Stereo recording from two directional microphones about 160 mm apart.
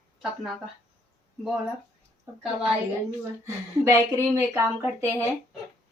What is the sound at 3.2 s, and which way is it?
Speech, 20° right (ahead or behind).